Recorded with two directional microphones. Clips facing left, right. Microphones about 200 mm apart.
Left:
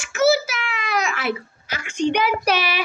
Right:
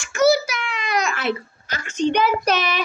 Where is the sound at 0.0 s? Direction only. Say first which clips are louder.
Right 1 dB; 5° left (ahead or behind).